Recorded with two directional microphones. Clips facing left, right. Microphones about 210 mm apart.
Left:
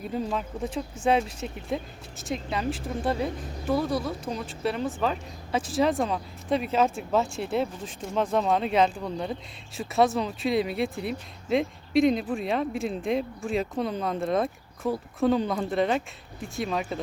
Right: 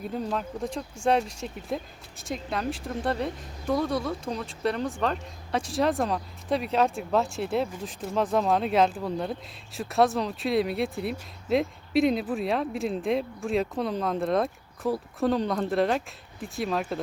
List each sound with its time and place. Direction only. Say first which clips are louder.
0.0 s speech: left 1 dB; centre (ahead or behind)